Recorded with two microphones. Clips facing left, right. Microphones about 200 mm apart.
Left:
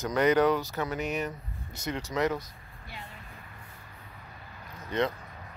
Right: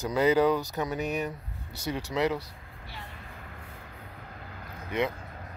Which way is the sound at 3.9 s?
65° right (ahead or behind).